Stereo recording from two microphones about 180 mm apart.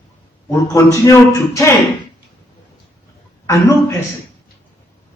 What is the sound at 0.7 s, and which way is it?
Speech, 20° left (ahead or behind).